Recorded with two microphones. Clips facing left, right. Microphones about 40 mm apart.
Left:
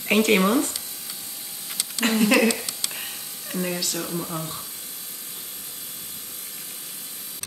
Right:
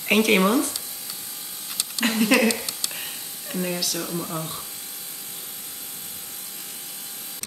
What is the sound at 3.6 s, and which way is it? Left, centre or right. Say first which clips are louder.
Speech: even; centre.